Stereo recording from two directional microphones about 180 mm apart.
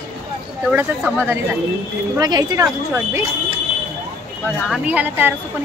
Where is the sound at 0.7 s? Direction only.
10° right (ahead or behind).